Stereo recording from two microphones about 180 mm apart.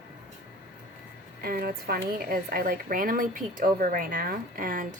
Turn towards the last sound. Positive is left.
turn(degrees=-50)  # may be behind; listen again after turning